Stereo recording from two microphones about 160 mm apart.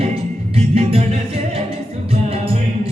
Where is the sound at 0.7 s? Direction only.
40° right (ahead or behind).